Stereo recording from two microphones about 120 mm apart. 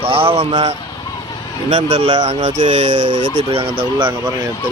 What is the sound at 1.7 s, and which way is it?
Speech, 90° right.